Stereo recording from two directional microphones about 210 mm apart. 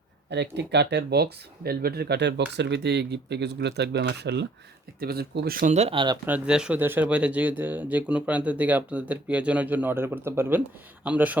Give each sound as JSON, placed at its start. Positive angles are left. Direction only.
{"t": 0.3, "sound": "speech", "side_deg": -55}
{"t": 6.2, "sound": "speech", "side_deg": -5}